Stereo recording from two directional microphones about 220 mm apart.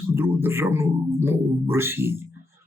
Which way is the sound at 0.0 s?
10° right (ahead or behind).